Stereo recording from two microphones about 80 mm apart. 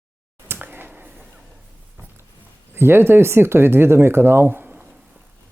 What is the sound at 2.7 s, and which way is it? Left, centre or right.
Speech, right.